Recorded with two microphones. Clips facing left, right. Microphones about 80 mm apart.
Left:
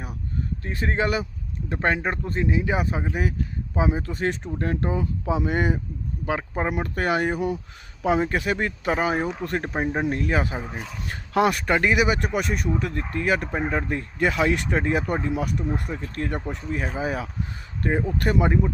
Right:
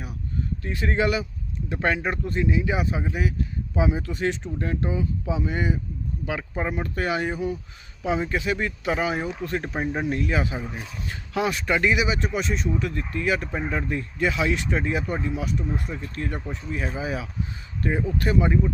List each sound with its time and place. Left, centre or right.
0.6 s speech: left
6.2 s speech: left
6.7 s speech: left
8.0 s speech: left
9.7 s speech: left
10.1 s speech: left
11.3 s speech: left
12.7 s speech: left